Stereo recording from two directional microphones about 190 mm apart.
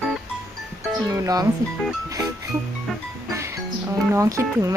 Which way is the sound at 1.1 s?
20° right (ahead or behind).